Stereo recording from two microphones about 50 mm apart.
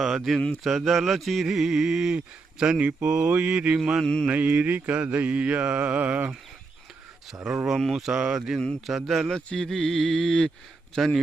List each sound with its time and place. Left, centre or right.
0.0 s speech: centre
2.1 s speech: centre
2.8 s mantra: right
4.0 s mantra: centre
4.3 s mantra: right
7.5 s speech: centre
8.9 s speech: centre
9.3 s mantra: centre
10.9 s speech: centre